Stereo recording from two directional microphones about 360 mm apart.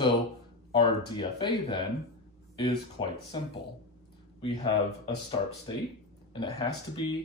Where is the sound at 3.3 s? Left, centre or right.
Centre.